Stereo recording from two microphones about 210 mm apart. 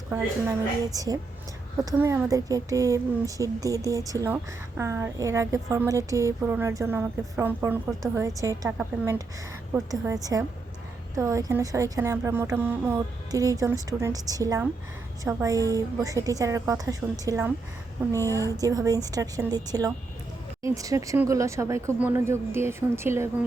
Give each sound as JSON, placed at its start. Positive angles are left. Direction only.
{"t": 0.1, "sound": "speech", "side_deg": -15}